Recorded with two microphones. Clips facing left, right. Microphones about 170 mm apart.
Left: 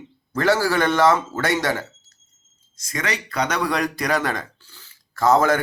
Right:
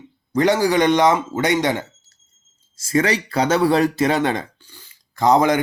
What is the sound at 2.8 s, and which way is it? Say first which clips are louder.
Speech: right 9 dB; 30° right (ahead or behind).